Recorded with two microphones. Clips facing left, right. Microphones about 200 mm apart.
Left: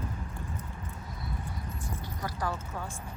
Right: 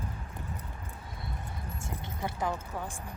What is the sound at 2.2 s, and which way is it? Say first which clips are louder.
Speech: right 2 dB; 20° right (ahead or behind).